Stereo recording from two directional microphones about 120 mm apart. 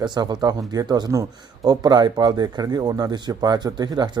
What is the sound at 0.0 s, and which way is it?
A man's voice, 35° right (ahead or behind).